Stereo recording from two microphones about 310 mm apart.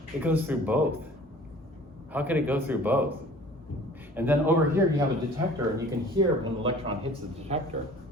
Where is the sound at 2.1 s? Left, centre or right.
Centre.